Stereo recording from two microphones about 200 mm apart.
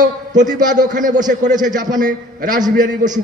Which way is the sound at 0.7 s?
40° right (ahead or behind).